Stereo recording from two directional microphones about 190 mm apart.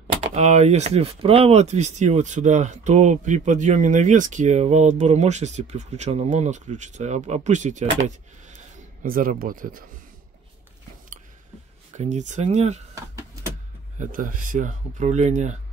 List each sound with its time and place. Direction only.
0.3 s speech: 35° right (ahead or behind)
9.0 s speech: 45° right (ahead or behind)
12.0 s speech: 40° right (ahead or behind)
13.9 s speech: 45° right (ahead or behind)